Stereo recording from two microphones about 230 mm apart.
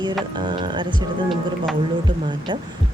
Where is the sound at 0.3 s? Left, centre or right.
Centre.